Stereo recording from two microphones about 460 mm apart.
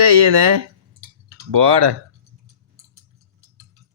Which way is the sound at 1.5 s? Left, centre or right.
Right.